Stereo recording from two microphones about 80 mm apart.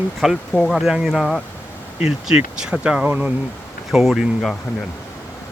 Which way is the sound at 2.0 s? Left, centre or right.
Centre.